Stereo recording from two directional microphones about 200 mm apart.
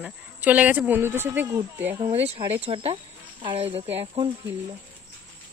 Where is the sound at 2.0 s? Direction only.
30° right (ahead or behind).